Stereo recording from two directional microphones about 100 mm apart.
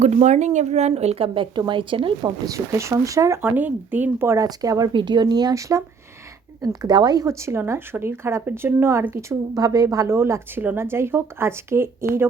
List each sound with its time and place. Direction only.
0.7 s a woman's voice: 90° right
1.3 s speech: 55° right (ahead or behind)
2.4 s speech: 30° right (ahead or behind)
3.4 s a woman's voice: 20° right (ahead or behind)
4.4 s speech: 40° right (ahead or behind)
6.6 s speech: 45° right (ahead or behind)
7.3 s a woman's voice: 30° right (ahead or behind)
9.6 s a woman's voice: 40° right (ahead or behind)